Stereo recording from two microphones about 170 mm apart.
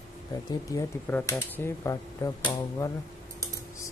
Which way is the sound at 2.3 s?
30° left (ahead or behind).